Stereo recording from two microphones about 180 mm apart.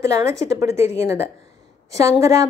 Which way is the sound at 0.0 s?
15° right (ahead or behind).